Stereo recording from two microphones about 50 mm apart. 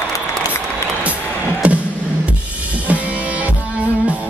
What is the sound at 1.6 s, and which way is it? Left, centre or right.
Music, right.